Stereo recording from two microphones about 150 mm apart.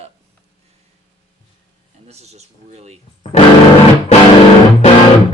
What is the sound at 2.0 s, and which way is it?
Speech, 45° right (ahead or behind).